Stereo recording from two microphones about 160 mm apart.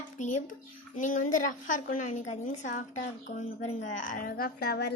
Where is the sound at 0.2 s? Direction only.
50° left (ahead or behind).